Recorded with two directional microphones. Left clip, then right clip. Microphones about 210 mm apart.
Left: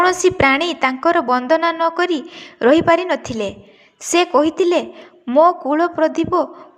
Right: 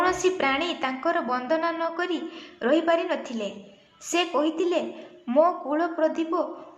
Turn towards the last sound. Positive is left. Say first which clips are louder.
# left 8 dB
turn(degrees=35)  # may be behind; listen again after turning